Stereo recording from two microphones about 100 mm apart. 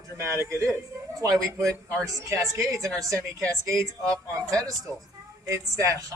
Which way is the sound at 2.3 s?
30° right (ahead or behind).